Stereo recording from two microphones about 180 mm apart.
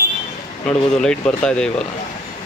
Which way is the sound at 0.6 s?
5° left (ahead or behind).